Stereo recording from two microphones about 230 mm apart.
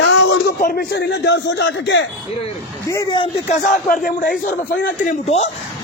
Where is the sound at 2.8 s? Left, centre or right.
Centre.